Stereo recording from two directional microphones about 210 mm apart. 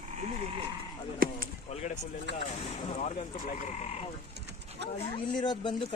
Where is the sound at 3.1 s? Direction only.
35° left (ahead or behind).